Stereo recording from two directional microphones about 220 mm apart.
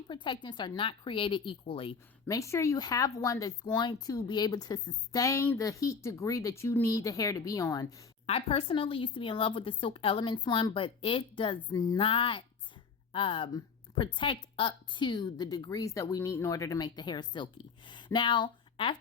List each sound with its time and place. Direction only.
0.1 s speech: 20° left (ahead or behind)
2.2 s speech: 15° left (ahead or behind)
8.3 s speech: 25° left (ahead or behind)